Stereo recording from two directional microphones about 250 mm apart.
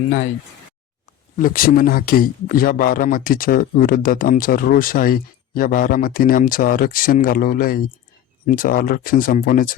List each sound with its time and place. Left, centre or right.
1.4 s speech: left